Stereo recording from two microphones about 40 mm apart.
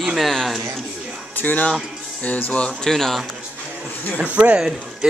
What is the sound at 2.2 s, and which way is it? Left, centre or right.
Speech, left.